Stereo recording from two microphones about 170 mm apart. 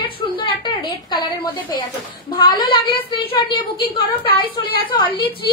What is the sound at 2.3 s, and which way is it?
A woman's voice, 25° left (ahead or behind).